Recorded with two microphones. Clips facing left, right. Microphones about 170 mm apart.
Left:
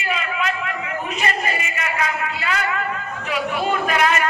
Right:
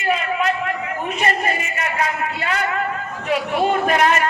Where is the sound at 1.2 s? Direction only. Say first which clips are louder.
Right 4 dB; 45° right (ahead or behind).